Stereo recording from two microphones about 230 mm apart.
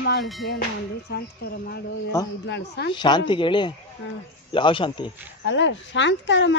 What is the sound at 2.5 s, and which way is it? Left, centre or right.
Speech, left.